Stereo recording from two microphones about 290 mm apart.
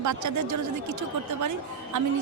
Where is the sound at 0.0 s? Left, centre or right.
Right.